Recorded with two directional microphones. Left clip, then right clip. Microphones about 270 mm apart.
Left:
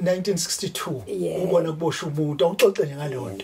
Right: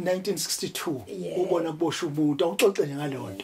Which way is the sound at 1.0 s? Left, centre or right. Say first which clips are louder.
Left 6 dB; left.